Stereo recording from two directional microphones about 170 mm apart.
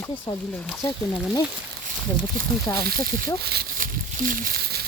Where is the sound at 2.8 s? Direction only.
60° right (ahead or behind).